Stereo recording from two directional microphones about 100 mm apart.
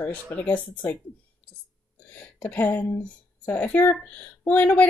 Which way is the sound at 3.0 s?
15° left (ahead or behind).